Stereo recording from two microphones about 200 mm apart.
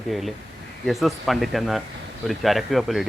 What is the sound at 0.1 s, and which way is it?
Speech, centre (ahead or behind).